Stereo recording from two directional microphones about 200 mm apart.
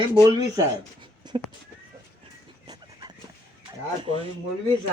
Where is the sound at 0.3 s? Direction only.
20° right (ahead or behind).